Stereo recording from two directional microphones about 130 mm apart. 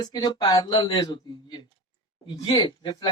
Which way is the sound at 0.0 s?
35° left (ahead or behind).